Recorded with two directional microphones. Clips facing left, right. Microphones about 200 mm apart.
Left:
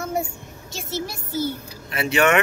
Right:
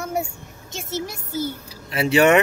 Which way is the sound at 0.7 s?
20° right (ahead or behind).